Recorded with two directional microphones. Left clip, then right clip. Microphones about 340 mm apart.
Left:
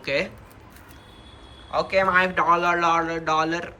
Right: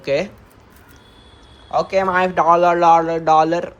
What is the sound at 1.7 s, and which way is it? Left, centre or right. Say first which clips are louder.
Speech: right 3 dB; centre.